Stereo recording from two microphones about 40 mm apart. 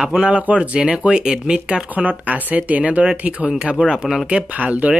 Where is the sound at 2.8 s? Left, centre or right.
Right.